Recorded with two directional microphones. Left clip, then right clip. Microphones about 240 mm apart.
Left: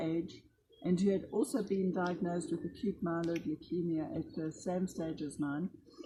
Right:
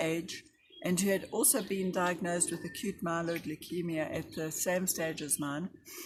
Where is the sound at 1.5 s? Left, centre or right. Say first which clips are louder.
Right 2 dB; right.